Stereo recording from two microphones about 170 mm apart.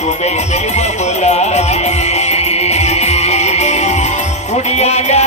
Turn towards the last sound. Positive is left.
turn(degrees=40)  # may be behind; listen again after turning